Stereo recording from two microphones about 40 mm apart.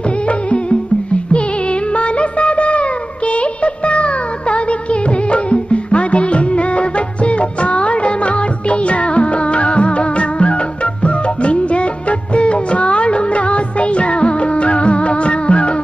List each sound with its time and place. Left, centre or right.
2.0 s music: left